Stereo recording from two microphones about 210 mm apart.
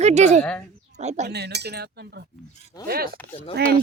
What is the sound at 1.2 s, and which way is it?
Chink, 50° right (ahead or behind).